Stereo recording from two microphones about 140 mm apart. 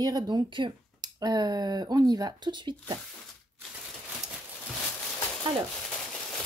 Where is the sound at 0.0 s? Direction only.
30° right (ahead or behind).